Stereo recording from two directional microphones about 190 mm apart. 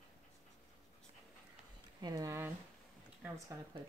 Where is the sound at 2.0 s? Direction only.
20° right (ahead or behind).